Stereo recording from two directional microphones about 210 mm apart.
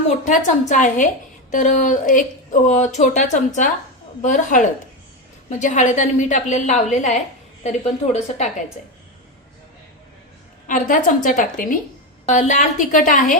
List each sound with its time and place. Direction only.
0.3 s a woman's voice: 35° left (ahead or behind)
10.7 s a woman's voice: 40° left (ahead or behind)